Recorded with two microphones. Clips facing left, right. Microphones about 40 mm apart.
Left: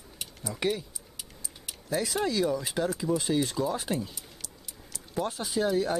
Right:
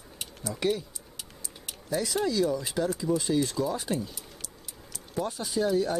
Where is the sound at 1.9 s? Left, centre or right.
Centre.